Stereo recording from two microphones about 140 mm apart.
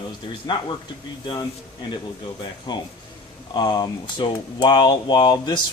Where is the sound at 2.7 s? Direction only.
30° left (ahead or behind).